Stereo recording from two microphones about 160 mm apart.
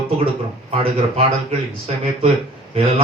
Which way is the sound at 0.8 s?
40° right (ahead or behind).